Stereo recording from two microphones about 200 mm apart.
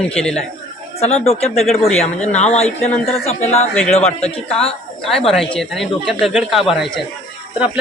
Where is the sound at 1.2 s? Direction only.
30° left (ahead or behind).